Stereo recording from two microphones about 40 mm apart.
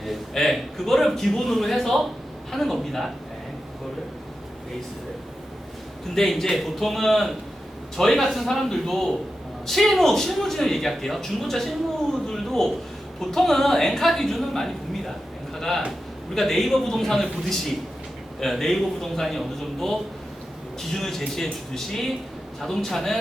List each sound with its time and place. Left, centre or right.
0.3 s a man's voice: centre
6.1 s a man's voice: centre
12.3 s a sound: centre
13.1 s a woman's voice: centre
22.6 s a man's voice: centre